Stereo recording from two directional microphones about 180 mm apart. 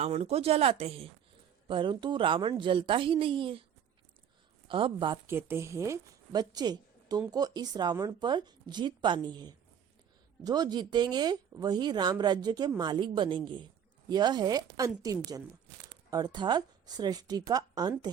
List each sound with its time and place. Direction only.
0.0 s speech: 35° right (ahead or behind)
4.7 s speech: 30° right (ahead or behind)
5.2 s speech: 10° right (ahead or behind)